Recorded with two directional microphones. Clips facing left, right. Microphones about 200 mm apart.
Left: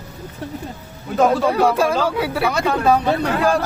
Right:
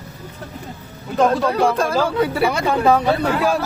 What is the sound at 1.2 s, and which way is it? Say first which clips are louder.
Speech: left 1 dB; 10° left (ahead or behind).